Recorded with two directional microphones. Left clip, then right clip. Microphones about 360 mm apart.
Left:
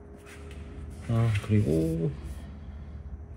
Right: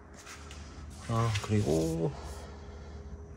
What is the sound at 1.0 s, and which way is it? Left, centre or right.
Speech, left.